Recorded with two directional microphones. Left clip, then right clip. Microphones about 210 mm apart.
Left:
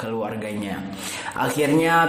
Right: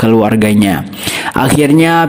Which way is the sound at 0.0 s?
45° right (ahead or behind).